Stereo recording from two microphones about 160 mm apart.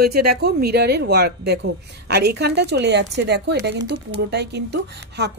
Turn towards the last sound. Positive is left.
turn(degrees=-90)